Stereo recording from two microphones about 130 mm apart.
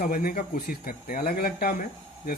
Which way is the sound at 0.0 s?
90° left.